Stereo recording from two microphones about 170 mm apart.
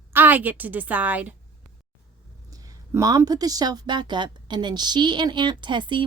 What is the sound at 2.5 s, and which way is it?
A woman's voice, 20° right (ahead or behind).